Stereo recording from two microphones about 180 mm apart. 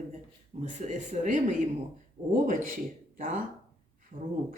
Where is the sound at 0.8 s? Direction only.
40° right (ahead or behind).